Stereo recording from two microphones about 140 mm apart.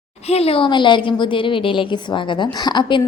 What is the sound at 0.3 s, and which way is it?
A woman's voice, 45° left (ahead or behind).